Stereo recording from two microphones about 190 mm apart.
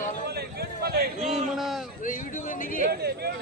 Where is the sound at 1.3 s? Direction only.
Centre (ahead or behind).